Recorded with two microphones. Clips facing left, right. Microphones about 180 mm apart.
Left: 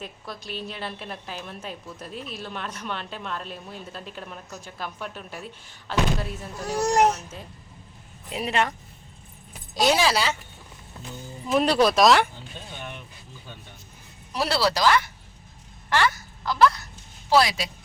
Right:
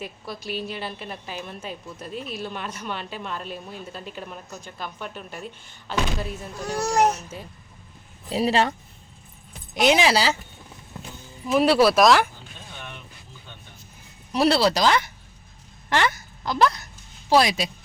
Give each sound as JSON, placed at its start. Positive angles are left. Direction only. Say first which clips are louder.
{"t": 0.0, "sound": "a woman's voice", "louder": "right 3 dB", "side_deg": -5}
{"t": 8.3, "sound": "speech", "louder": "right 4 dB", "side_deg": -30}
{"t": 9.7, "sound": "speech", "louder": "right 2 dB", "side_deg": -20}
{"t": 11.5, "sound": "a woman's voice", "louder": "right 2 dB", "side_deg": -5}
{"t": 14.3, "sound": "speech", "louder": "right 5 dB", "side_deg": -25}